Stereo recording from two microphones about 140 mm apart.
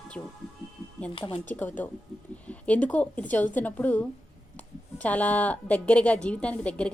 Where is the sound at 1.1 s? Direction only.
40° left (ahead or behind).